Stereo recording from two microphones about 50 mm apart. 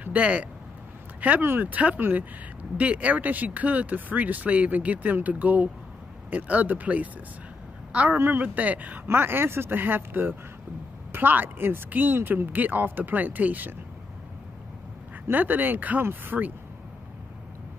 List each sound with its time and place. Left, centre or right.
0.0 s speech: right
2.0 s speech: right
2.8 s a woman's voice: right
9.0 s speech: right
12.5 s speech: right
15.3 s speech: right